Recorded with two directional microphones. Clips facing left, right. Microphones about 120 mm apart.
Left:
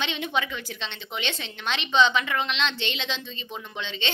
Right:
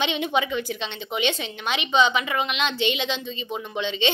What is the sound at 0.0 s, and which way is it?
A woman's voice, 15° right (ahead or behind).